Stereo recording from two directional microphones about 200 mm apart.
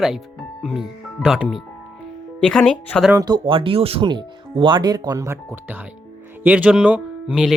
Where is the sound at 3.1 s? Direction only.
20° right (ahead or behind).